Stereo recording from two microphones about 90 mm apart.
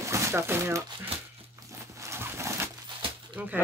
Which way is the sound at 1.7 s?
35° right (ahead or behind).